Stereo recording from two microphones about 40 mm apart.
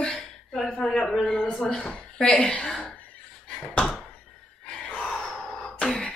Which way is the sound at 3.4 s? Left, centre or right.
Left.